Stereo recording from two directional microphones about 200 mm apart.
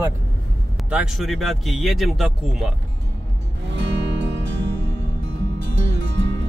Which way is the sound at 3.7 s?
60° right (ahead or behind).